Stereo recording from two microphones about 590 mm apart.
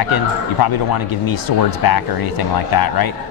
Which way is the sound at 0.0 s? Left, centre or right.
Left.